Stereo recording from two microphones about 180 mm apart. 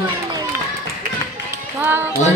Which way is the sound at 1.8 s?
10° right (ahead or behind).